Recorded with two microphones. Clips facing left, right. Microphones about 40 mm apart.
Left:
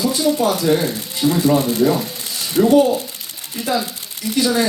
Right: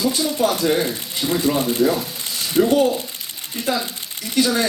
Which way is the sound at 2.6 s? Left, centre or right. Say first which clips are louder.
Left 2 dB; centre.